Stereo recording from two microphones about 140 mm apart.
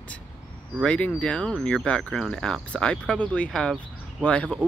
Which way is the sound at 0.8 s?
10° left (ahead or behind).